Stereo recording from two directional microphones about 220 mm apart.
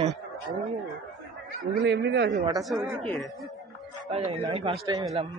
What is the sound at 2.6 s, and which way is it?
Speech, centre (ahead or behind).